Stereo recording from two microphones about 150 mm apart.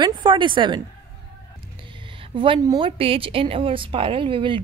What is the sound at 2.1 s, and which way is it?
A woman's voice, 35° right (ahead or behind).